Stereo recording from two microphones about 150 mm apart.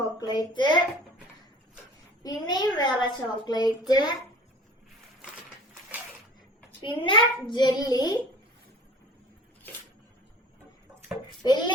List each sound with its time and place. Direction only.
0.0 s a woman's voice: 25° left (ahead or behind)
2.2 s a child's voice: 25° left (ahead or behind)
6.8 s a child's voice: 35° left (ahead or behind)
11.4 s a child's voice: 30° left (ahead or behind)